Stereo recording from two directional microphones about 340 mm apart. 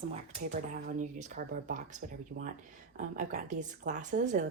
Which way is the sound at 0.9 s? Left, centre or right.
Right.